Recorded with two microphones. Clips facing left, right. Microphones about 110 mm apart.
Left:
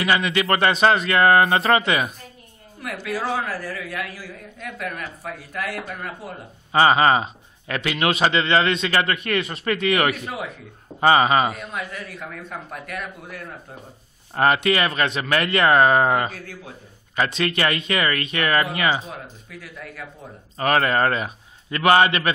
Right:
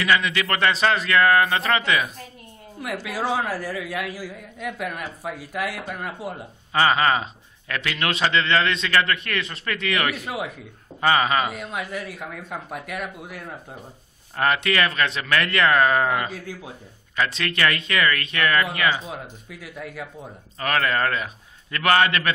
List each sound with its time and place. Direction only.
0.0 s a man's voice: 30° left (ahead or behind)
2.8 s a man's voice: 10° right (ahead or behind)
6.7 s a man's voice: 25° left (ahead or behind)
10.2 s a man's voice: 5° right (ahead or behind)
11.0 s a man's voice: 25° left (ahead or behind)
11.7 s a man's voice: 10° right (ahead or behind)
14.3 s a man's voice: 30° left (ahead or behind)
17.4 s a man's voice: 20° left (ahead or behind)
20.5 s a man's voice: 30° left (ahead or behind)